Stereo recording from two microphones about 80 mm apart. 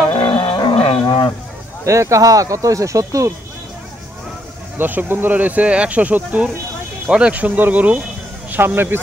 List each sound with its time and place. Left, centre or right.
0.1 s roaring cats: left
1.0 s a sound: left
1.9 s speech: right
4.7 s speech: right